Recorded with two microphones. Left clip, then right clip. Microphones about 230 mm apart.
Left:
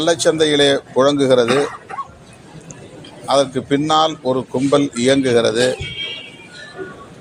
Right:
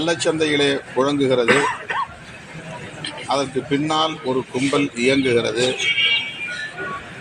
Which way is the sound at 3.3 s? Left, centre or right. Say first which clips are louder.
Left 6 dB; left.